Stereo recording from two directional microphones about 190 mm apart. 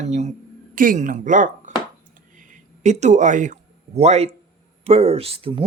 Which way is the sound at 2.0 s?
45° right (ahead or behind).